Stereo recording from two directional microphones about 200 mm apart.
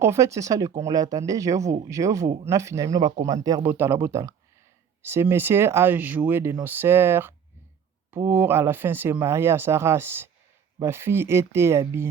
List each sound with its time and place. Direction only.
0.0 s speech: 15° right (ahead or behind)